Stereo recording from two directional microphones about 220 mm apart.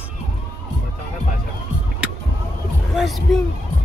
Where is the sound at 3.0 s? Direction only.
Centre (ahead or behind).